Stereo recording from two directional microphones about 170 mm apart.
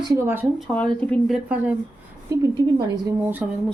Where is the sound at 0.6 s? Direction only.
5° left (ahead or behind).